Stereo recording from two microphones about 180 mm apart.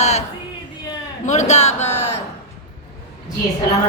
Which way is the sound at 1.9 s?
15° left (ahead or behind).